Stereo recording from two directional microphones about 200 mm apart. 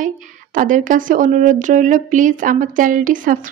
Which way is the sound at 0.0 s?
40° right (ahead or behind).